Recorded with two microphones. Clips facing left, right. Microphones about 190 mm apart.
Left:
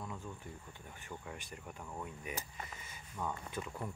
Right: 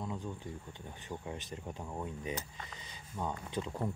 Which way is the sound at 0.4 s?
20° right (ahead or behind).